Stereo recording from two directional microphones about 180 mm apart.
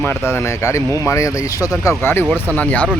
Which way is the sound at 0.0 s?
15° left (ahead or behind).